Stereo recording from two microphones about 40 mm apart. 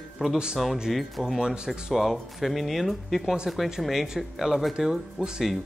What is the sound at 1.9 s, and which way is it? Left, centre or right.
Speech, centre.